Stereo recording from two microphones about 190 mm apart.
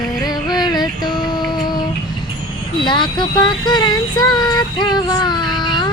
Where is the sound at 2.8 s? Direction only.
25° left (ahead or behind).